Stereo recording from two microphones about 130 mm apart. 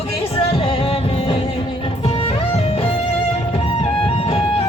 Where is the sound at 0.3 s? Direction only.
45° left (ahead or behind).